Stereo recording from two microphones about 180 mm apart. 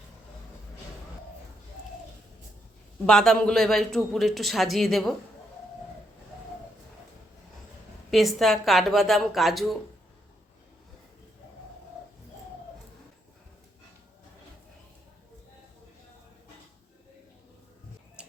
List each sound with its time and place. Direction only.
3.1 s a man's voice: 5° left (ahead or behind)
8.1 s a man's voice: centre (ahead or behind)
18.2 s tick-tock: 5° right (ahead or behind)